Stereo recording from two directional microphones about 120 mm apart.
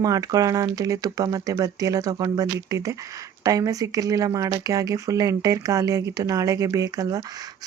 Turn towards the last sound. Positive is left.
turn(degrees=-30)  # may be behind; listen again after turning